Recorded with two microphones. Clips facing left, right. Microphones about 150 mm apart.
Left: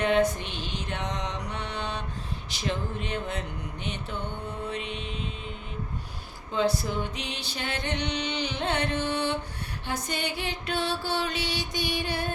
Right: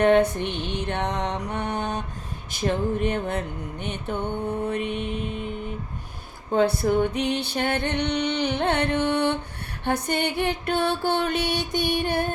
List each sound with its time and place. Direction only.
0.0 s mantra: 60° right (ahead or behind)
2.5 s a sound: 50° right (ahead or behind)
6.5 s music: 55° right (ahead or behind)